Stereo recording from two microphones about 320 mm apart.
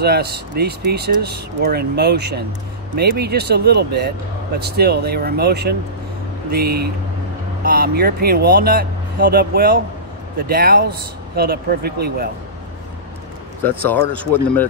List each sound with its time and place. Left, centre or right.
0.0 s speech: right
13.7 s speech: centre